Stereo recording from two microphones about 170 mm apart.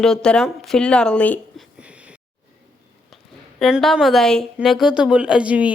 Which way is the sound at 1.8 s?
5° right (ahead or behind).